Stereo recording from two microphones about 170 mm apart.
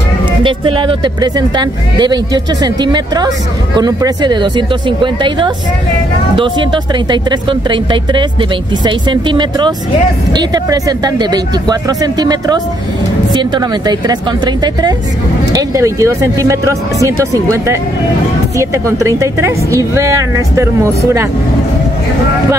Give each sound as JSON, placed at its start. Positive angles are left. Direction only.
{"t": 0.4, "sound": "a woman's voice", "side_deg": -30}